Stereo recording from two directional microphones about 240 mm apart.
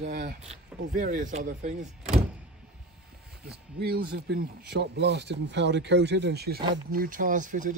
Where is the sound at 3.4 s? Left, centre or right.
Right.